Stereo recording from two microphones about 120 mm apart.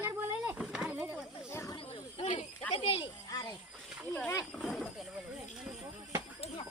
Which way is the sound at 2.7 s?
45° left (ahead or behind).